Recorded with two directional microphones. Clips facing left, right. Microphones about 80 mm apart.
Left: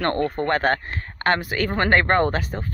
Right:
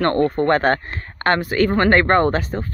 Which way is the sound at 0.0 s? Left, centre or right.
Centre.